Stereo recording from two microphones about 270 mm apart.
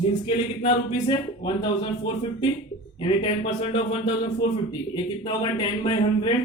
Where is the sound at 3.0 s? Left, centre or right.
Centre.